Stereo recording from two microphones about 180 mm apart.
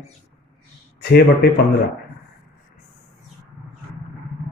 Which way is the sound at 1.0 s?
65° left (ahead or behind).